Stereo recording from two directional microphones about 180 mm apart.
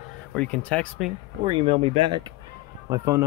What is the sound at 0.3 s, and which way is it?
Speech, 5° left (ahead or behind).